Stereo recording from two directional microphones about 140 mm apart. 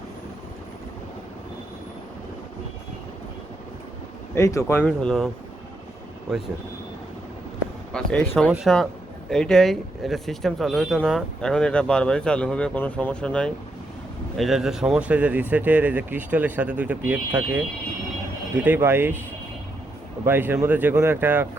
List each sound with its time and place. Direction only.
4.4 s speech: 20° left (ahead or behind)
4.9 s speech: 5° left (ahead or behind)
7.9 s speech: 5° left (ahead or behind)
8.4 s speech: 5° right (ahead or behind)
9.3 s speech: 5° left (ahead or behind); by 19.1 s 15° right (ahead or behind)
20.2 s speech: 15° right (ahead or behind)